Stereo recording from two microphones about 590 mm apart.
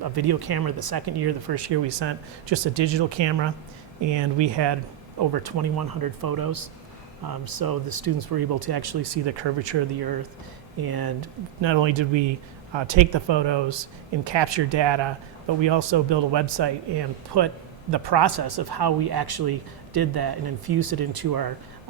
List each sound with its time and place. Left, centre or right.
0.0 s speech: right